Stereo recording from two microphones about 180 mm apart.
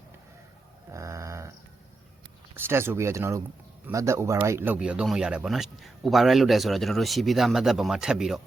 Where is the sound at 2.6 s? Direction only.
15° right (ahead or behind).